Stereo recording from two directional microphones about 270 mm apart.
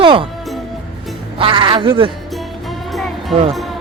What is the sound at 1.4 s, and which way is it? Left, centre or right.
Speech, centre.